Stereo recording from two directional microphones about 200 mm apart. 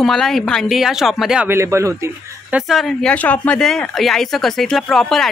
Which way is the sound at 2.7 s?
Centre (ahead or behind).